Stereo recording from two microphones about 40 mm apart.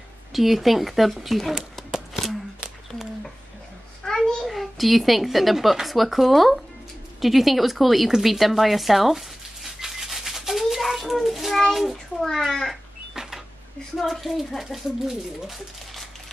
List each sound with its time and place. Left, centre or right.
0.3 s speech: centre
1.8 s a sound: centre
4.0 s a sound: centre
4.4 s speech: centre
8.1 s a sound: centre
11.7 s speech: centre
12.2 s a child's voice: centre
13.1 s cash register: centre
13.9 s speech: centre